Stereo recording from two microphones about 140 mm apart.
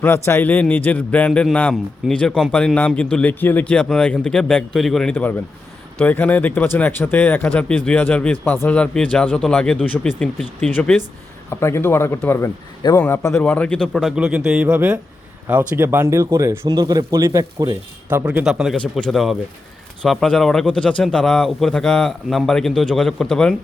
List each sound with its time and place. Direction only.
0.0 s a man's voice: 15° left (ahead or behind)
10.7 s a man's voice: 15° left (ahead or behind); by 17.7 s 25° right (ahead or behind)
18.1 s speech: 10° right (ahead or behind)
18.4 s speech: centre (ahead or behind)